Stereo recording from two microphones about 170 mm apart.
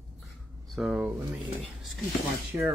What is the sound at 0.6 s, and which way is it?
Speech, 5° right (ahead or behind).